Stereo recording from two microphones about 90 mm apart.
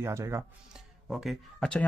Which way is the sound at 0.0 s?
30° right (ahead or behind).